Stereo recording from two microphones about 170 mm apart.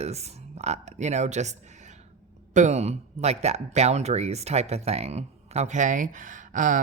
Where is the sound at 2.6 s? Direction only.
40° right (ahead or behind).